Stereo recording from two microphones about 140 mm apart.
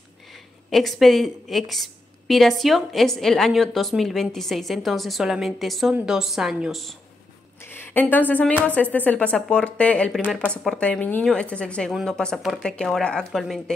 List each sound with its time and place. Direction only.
0.7 s a woman's voice: centre (ahead or behind)
7.6 s a woman's voice: 15° left (ahead or behind)